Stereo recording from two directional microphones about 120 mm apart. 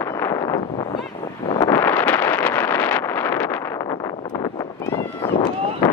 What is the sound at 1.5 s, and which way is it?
Wind noise, 25° left (ahead or behind).